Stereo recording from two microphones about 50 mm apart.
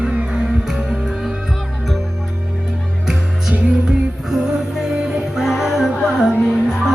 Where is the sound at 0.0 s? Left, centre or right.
Centre.